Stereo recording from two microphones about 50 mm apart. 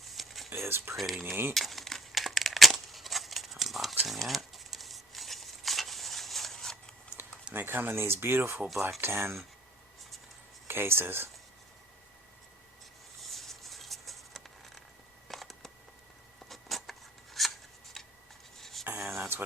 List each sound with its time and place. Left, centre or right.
0.0 s whispering: centre
0.5 s speech: right
0.9 s speech: centre
1.5 s a sound: centre
7.2 s typing: right
7.5 s speech: right
10.7 s speech: right
13.3 s music: centre
15.3 s a sound: centre
17.4 s filing: centre
18.0 s scissors: centre
18.5 s a sound: centre
18.9 s a sound: right